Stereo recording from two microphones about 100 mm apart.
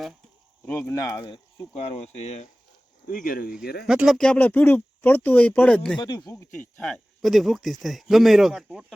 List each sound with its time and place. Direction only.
0.6 s speech: 20° left (ahead or behind)
0.9 s speech: 35° left (ahead or behind)
1.7 s speech: 80° left
3.5 s speech: 5° right (ahead or behind)
4.2 s speech: 15° left (ahead or behind)
6.0 s speech: 40° left (ahead or behind)
6.8 s speech: centre (ahead or behind)